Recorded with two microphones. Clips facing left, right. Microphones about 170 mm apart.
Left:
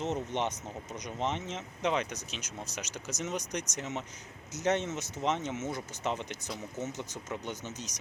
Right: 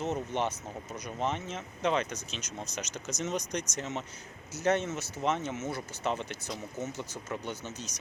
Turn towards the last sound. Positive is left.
turn(degrees=15)  # may be behind; listen again after turning